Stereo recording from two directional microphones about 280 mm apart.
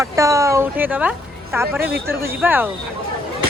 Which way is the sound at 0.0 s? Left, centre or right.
Centre.